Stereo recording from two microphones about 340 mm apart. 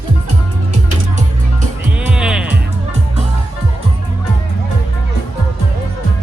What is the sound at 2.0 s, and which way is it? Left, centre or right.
Music, centre.